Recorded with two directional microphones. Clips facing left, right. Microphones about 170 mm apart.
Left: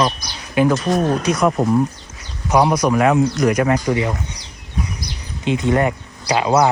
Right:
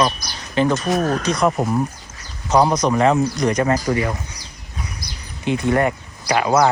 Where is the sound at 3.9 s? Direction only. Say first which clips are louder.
Left 1 dB; 20° left (ahead or behind).